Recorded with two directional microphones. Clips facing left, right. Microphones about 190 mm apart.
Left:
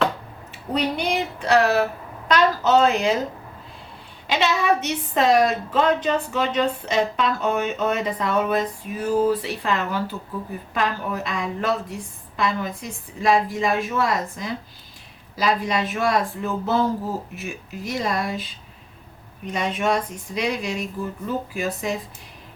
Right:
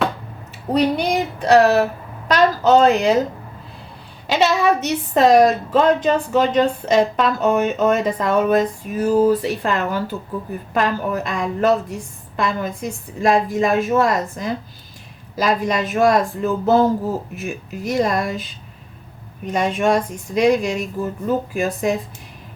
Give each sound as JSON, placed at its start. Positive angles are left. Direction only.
{"t": 0.7, "sound": "speech", "side_deg": -40}
{"t": 4.3, "sound": "a woman's voice", "side_deg": -40}
{"t": 19.5, "sound": "a woman's voice", "side_deg": -45}